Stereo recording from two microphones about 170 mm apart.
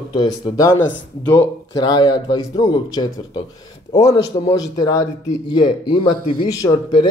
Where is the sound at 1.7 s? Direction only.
25° left (ahead or behind).